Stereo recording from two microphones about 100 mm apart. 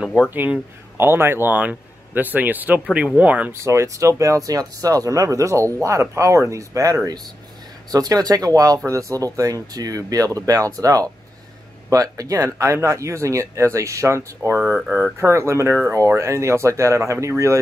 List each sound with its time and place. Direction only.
0.3 s speech: 20° right (ahead or behind)
3.5 s speech: 30° right (ahead or behind); by 15.0 s 15° right (ahead or behind)
15.1 s speech: 30° right (ahead or behind)